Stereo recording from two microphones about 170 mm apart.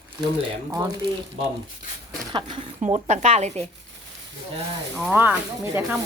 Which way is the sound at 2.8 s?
40° right (ahead or behind).